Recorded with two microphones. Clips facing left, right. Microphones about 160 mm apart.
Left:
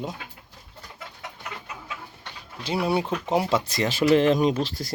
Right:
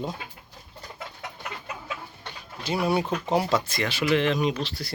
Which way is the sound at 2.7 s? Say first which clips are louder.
Even; 30° left (ahead or behind).